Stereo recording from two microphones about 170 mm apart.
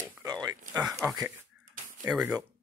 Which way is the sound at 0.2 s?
25° right (ahead or behind).